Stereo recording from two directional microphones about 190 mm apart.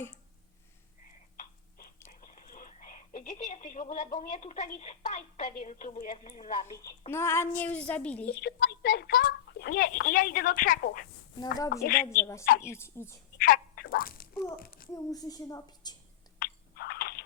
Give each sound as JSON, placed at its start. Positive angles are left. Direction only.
{"t": 2.0, "sound": "speech", "side_deg": 45}
{"t": 7.1, "sound": "speech", "side_deg": 15}
{"t": 8.3, "sound": "a woman's voice", "side_deg": 55}
{"t": 12.1, "sound": "speech", "side_deg": 15}
{"t": 13.4, "sound": "a sound", "side_deg": 50}
{"t": 14.9, "sound": "a woman's voice", "side_deg": 20}
{"t": 16.4, "sound": "a sound", "side_deg": 50}